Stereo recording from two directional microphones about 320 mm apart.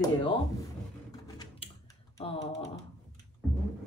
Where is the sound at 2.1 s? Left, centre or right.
Centre.